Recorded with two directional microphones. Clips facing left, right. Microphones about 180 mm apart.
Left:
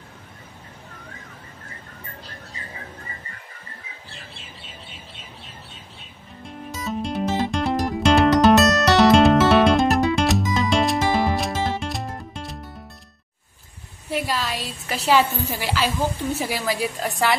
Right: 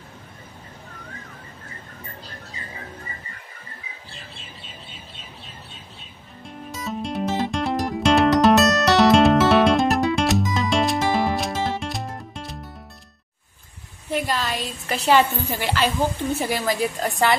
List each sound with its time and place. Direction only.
6.4 s music: centre (ahead or behind)
14.1 s a woman's voice: 5° left (ahead or behind)